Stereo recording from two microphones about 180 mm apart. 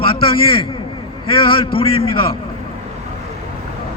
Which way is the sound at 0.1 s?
30° left (ahead or behind).